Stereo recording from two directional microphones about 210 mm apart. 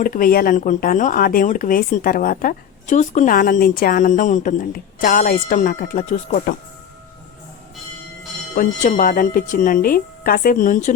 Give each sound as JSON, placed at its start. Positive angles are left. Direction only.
{"t": 0.0, "sound": "speech", "side_deg": 40}
{"t": 8.5, "sound": "speech", "side_deg": 40}